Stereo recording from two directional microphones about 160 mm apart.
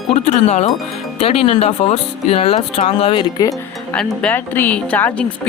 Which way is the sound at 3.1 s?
25° left (ahead or behind).